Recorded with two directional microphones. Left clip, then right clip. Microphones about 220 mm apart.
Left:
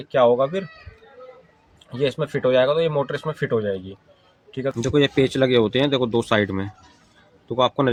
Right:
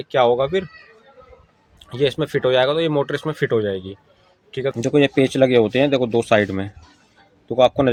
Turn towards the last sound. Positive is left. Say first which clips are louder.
# right 4 dB
turn(degrees=-5)  # may be behind; listen again after turning